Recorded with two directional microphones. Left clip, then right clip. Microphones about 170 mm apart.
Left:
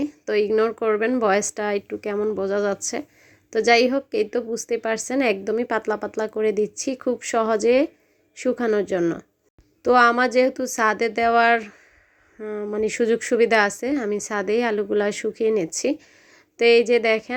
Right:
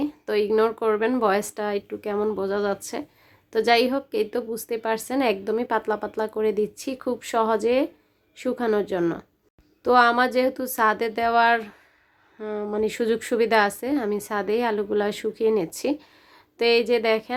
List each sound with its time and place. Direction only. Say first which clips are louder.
0.0 s a woman's voice: left 2 dB; 15° left (ahead or behind)